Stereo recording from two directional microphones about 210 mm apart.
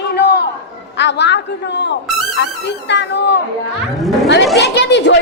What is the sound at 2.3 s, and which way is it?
Speech, 55° left (ahead or behind).